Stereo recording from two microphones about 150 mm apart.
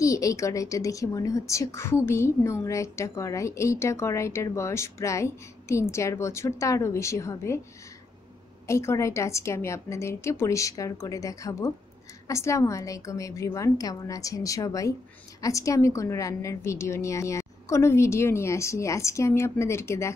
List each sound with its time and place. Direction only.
0.0 s a woman's voice: 20° left (ahead or behind)
8.6 s a woman's voice: 20° left (ahead or behind)